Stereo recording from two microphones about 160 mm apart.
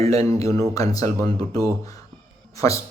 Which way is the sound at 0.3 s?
20° left (ahead or behind).